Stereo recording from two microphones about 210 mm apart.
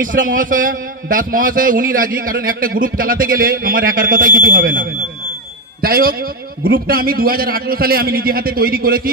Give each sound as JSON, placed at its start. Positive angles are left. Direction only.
{"t": 0.0, "sound": "a man's voice", "side_deg": -40}